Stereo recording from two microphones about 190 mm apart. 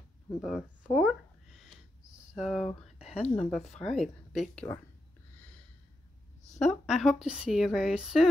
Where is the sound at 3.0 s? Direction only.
35° left (ahead or behind).